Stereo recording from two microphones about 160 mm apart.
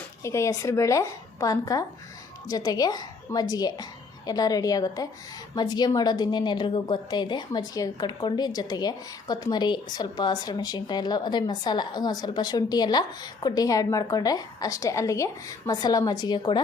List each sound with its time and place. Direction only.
0.2 s a woman's voice: 20° left (ahead or behind)